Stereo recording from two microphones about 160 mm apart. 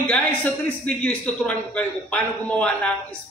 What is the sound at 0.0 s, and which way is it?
A man's voice, 10° left (ahead or behind).